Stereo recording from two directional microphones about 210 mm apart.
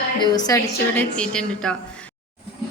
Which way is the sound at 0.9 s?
5° left (ahead or behind).